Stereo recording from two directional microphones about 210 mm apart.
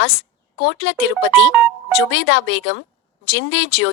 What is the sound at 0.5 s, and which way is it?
A woman's voice, 60° left (ahead or behind).